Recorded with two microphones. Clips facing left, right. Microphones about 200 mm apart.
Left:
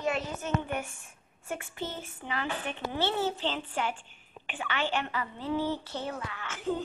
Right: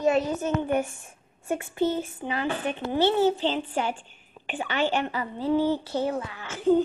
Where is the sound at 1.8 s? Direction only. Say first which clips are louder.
Right 11 dB; 15° right (ahead or behind).